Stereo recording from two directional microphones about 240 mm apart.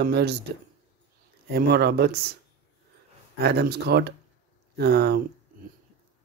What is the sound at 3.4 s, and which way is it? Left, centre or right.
Speech, right.